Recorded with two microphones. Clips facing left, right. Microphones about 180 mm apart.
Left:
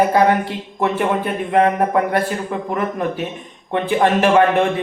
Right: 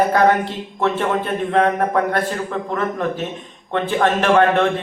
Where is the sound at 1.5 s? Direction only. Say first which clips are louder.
Left 2 dB; 20° left (ahead or behind).